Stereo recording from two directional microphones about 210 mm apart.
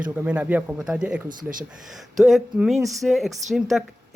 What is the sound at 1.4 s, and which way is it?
Speech, 40° right (ahead or behind).